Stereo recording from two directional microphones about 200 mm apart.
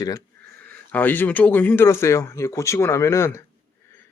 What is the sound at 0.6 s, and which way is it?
Speech, 10° left (ahead or behind).